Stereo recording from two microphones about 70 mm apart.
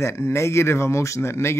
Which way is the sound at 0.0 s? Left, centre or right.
Left.